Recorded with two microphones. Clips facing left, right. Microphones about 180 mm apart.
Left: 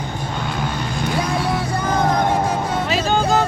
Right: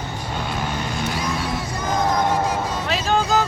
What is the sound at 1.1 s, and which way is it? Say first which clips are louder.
Vehicle: left 4 dB; 60° left (ahead or behind).